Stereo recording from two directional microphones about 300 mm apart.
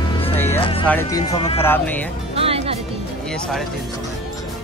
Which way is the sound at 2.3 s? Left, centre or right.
Centre.